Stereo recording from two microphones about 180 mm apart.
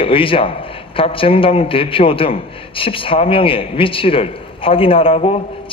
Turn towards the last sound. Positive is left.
turn(degrees=35)  # may be behind; listen again after turning